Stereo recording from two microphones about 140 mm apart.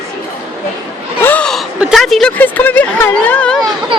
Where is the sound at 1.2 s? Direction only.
10° left (ahead or behind).